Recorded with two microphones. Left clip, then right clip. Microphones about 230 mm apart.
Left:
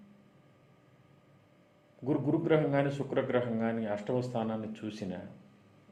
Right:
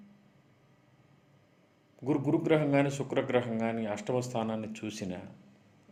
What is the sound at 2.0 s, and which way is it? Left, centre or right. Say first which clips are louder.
A man's voice: right 1 dB; right.